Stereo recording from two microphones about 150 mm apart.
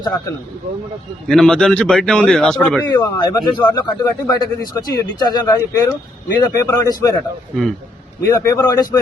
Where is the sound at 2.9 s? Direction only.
25° left (ahead or behind).